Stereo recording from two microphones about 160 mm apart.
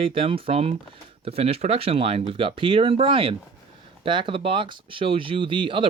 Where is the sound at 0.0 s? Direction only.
35° right (ahead or behind).